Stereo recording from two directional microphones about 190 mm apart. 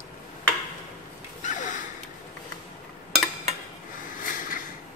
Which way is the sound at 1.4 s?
40° left (ahead or behind).